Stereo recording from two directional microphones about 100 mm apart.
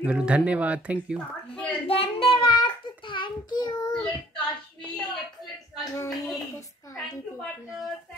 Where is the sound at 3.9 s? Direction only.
10° left (ahead or behind).